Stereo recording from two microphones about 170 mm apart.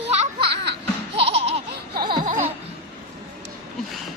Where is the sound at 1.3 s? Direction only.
35° right (ahead or behind).